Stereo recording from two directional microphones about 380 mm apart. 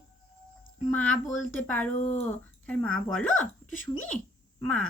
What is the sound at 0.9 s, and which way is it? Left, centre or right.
Speech, centre.